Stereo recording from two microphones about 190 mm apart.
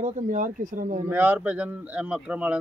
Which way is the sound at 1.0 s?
10° right (ahead or behind).